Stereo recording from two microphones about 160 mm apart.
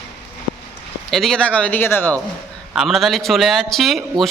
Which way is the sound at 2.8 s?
Centre (ahead or behind).